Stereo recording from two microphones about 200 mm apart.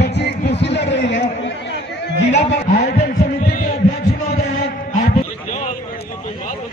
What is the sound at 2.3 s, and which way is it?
Speech, 35° left (ahead or behind).